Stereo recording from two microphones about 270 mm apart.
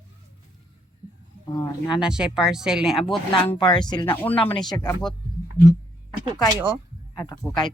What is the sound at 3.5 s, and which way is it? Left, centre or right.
Speech, centre.